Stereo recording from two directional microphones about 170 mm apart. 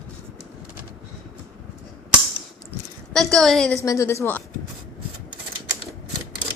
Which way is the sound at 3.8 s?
15° left (ahead or behind).